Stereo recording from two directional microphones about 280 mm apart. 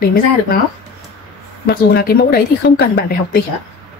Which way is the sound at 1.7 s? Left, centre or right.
Left.